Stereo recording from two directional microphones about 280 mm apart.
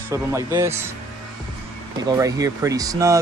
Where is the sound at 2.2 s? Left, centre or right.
Centre.